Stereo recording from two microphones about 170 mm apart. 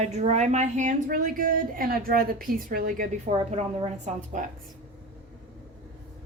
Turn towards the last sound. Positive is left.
turn(degrees=-50)  # may be behind; listen again after turning